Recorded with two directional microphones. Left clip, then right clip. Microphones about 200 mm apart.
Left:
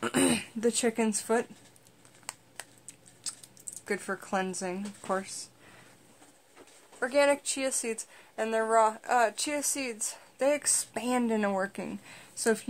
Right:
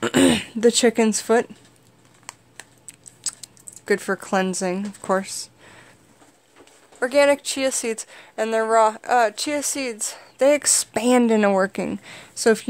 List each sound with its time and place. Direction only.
0.0 s speech: 40° right (ahead or behind)
2.3 s a sound: centre (ahead or behind)
3.3 s speech: 45° right (ahead or behind)
7.0 s speech: 50° right (ahead or behind)